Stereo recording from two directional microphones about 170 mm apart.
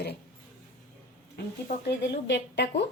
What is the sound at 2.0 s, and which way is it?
Speech, 85° left.